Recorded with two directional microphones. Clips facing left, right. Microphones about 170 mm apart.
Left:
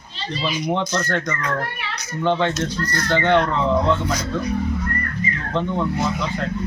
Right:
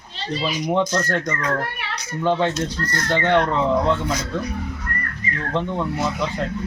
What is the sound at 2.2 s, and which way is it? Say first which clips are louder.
Speech: even; 5° right (ahead or behind).